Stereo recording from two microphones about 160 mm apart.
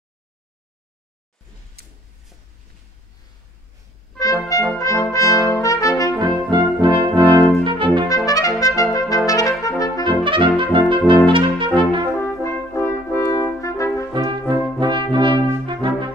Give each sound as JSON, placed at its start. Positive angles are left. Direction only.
{"t": 1.8, "sound": "a sound", "side_deg": -80}
{"t": 4.2, "sound": "brass instrument", "side_deg": 20}
{"t": 6.1, "sound": "brass instrument", "side_deg": -30}
{"t": 8.3, "sound": "trumpet", "side_deg": 20}
{"t": 10.0, "sound": "brass instrument", "side_deg": -30}
{"t": 12.2, "sound": "brass instrument", "side_deg": 15}
{"t": 14.1, "sound": "brass instrument", "side_deg": -30}